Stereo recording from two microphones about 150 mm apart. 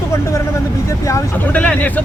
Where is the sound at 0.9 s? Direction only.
15° left (ahead or behind).